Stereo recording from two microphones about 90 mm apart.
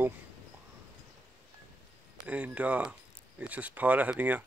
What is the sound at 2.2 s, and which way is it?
Speech, 15° right (ahead or behind).